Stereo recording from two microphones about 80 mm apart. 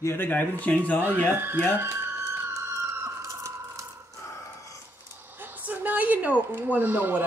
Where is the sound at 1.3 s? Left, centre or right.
Right.